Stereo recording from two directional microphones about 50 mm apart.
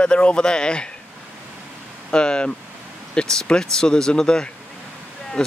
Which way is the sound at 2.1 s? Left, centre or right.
Centre.